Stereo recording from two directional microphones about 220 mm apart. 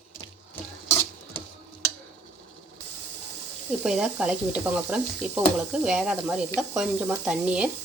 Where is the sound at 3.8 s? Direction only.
Centre (ahead or behind).